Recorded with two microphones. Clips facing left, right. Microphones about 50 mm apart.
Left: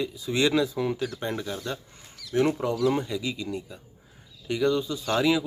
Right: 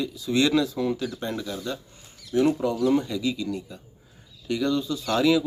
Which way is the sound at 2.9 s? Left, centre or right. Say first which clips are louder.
Right 3 dB; centre.